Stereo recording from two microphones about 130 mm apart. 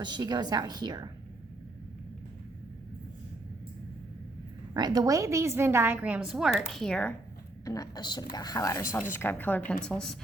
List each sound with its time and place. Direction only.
0.0 s a woman's voice: 35° right (ahead or behind)
4.7 s a woman's voice: 30° right (ahead or behind); by 7.1 s 5° left (ahead or behind)
7.6 s a woman's voice: 25° left (ahead or behind); by 10.2 s 5° left (ahead or behind)